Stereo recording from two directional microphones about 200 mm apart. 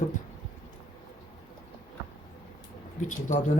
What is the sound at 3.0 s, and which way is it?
Speech, 40° left (ahead or behind).